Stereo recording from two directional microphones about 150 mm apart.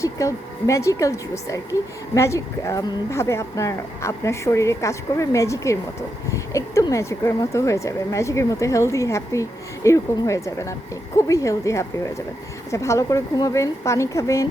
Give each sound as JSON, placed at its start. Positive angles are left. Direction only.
{"t": 0.0, "sound": "speech", "side_deg": 20}